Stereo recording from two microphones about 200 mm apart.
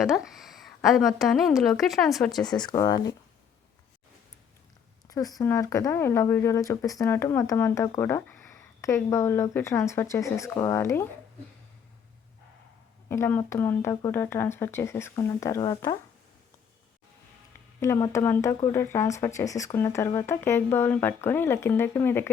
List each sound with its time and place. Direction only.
0.0 s a woman's voice: centre (ahead or behind)
2.5 s speech: 20° left (ahead or behind)
5.0 s speech: 15° left (ahead or behind)
13.1 s speech: 10° left (ahead or behind)
17.7 s speech: 15° left (ahead or behind)